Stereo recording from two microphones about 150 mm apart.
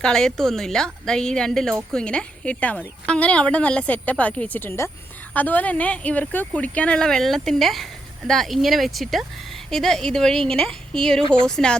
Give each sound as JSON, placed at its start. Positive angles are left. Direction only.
{"t": 0.0, "sound": "a woman's voice", "side_deg": 5}
{"t": 11.2, "sound": "speech", "side_deg": -30}
{"t": 11.4, "sound": "a woman's voice", "side_deg": 5}